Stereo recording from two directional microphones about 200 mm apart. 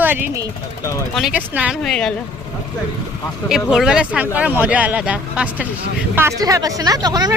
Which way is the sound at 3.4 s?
Centre (ahead or behind).